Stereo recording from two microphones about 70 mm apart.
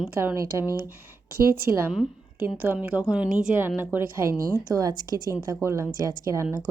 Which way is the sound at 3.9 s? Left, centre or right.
Right.